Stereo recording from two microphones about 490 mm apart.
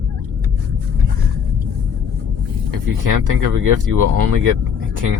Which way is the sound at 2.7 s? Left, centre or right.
Right.